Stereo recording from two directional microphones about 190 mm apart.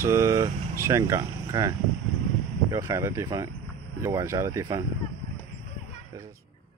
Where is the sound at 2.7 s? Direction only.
15° right (ahead or behind).